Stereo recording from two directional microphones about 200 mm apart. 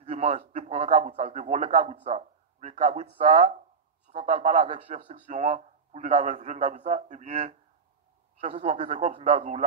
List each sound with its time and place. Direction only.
0.0 s speech: 30° right (ahead or behind)